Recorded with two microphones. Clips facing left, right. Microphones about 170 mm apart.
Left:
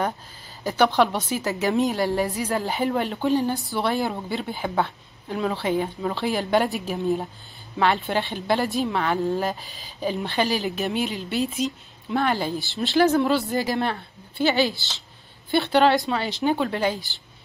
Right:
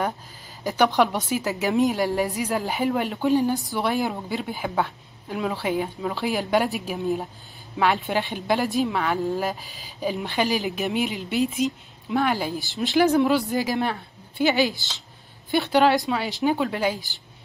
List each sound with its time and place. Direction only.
0.7 s speech: 15° right (ahead or behind)
12.8 s speech: 15° right (ahead or behind)